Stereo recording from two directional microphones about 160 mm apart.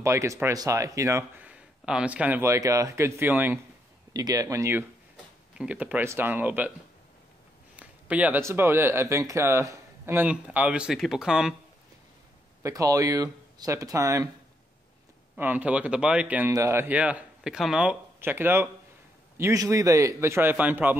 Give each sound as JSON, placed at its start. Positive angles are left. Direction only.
{"t": 0.0, "sound": "speech", "side_deg": -20}
{"t": 1.5, "sound": "speech", "side_deg": -5}
{"t": 7.7, "sound": "speech", "side_deg": -10}
{"t": 12.6, "sound": "speech", "side_deg": -20}
{"t": 15.3, "sound": "speech", "side_deg": -10}